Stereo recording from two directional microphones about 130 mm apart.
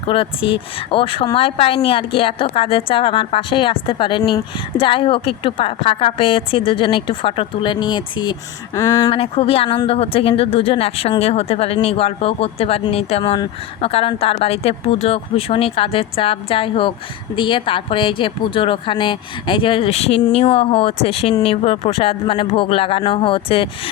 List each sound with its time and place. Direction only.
0.1 s speech: 45° left (ahead or behind)
8.7 s speech: 25° left (ahead or behind)
9.1 s speech: 45° left (ahead or behind)